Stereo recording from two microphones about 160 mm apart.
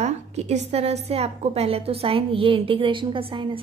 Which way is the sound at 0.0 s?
45° right (ahead or behind).